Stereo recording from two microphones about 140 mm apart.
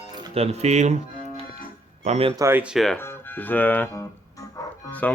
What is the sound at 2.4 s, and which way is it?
Speech, 20° right (ahead or behind).